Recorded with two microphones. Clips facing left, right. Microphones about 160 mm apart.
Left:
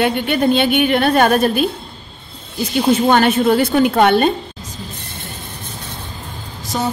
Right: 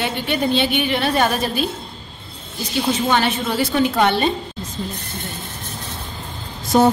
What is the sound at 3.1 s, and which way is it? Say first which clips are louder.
A woman's voice: left 7 dB; 55° left (ahead or behind).